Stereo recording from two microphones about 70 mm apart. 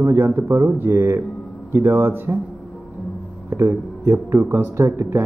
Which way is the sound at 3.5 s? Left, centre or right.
Right.